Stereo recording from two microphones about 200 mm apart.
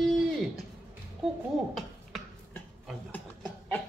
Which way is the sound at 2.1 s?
Centre (ahead or behind).